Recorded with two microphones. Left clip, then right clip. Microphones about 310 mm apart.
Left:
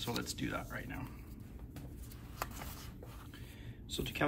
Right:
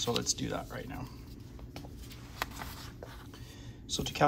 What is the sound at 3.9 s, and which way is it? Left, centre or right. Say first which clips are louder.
Speech: right 7 dB; centre.